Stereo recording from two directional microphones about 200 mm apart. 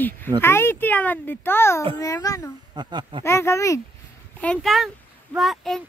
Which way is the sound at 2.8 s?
20° right (ahead or behind).